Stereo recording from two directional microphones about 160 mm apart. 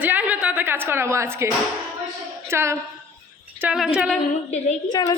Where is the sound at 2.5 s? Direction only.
15° right (ahead or behind).